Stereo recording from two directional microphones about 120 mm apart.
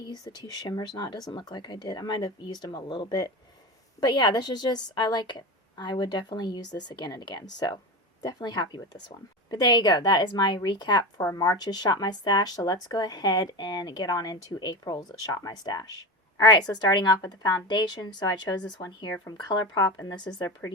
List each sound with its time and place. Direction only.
0.0 s a woman's voice: 35° left (ahead or behind)